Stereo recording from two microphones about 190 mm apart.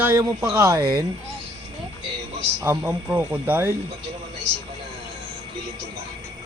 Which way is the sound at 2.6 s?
15° right (ahead or behind).